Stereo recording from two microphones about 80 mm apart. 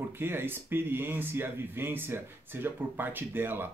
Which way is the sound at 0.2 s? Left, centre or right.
Right.